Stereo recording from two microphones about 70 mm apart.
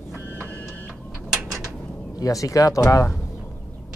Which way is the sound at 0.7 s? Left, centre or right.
Left.